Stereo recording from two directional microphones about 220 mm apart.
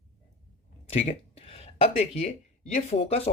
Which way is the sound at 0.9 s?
25° left (ahead or behind).